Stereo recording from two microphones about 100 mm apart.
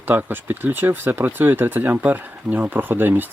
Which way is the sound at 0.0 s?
20° right (ahead or behind).